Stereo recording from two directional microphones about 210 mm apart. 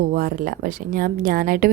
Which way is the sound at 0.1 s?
40° right (ahead or behind).